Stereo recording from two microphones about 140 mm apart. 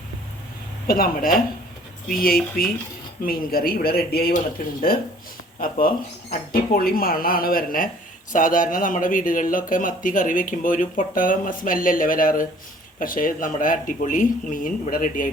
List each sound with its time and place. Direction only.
0.9 s speech: 90° left
6.5 s speech: 90° left
8.3 s speech: 70° left (ahead or behind)